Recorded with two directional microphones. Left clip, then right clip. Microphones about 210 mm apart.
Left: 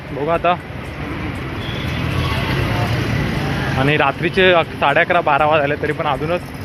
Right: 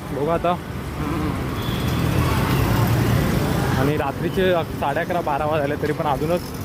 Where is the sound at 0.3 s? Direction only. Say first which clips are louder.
Left 5 dB; centre (ahead or behind).